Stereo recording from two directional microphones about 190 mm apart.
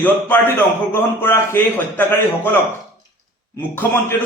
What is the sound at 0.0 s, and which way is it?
A man's voice, 10° left (ahead or behind).